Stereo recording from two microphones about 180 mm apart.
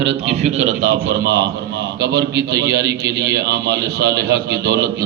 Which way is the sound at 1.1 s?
60° right (ahead or behind).